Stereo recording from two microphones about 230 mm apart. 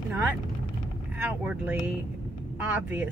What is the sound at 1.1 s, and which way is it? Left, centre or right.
Speech, centre.